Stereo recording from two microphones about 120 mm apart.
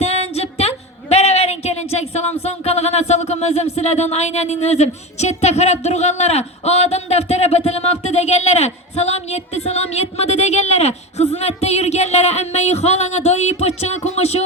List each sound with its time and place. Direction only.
0.0 s music: 60° left (ahead or behind)
1.1 s speech: 60° left (ahead or behind)